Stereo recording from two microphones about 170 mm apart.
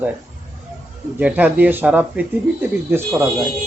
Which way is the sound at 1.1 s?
10° right (ahead or behind).